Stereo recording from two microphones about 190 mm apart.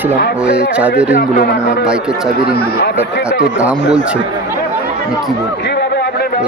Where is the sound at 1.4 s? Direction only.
60° left (ahead or behind).